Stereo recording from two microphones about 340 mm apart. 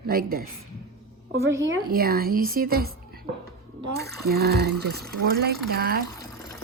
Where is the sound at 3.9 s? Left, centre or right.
Right.